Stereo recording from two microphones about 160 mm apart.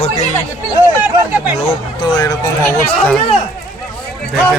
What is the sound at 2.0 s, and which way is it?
Speech, 25° left (ahead or behind).